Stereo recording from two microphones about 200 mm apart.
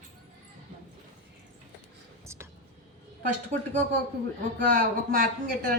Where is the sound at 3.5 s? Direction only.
35° right (ahead or behind).